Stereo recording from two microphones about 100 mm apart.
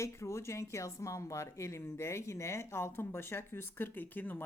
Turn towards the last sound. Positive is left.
turn(degrees=20)  # may be behind; listen again after turning